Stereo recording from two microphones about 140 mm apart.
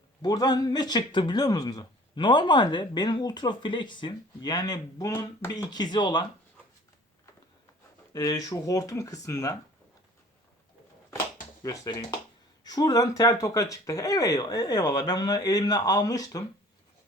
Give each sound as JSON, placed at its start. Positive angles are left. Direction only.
{"t": 0.2, "sound": "speech", "side_deg": 30}
{"t": 8.1, "sound": "speech", "side_deg": 25}
{"t": 11.6, "sound": "speech", "side_deg": 25}